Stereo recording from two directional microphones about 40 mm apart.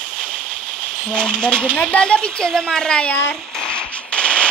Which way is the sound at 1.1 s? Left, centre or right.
Left.